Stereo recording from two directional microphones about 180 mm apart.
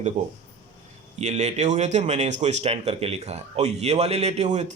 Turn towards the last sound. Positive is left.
turn(degrees=-40)  # may be behind; listen again after turning